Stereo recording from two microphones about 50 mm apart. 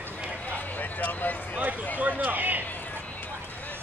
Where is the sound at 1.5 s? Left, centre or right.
Right.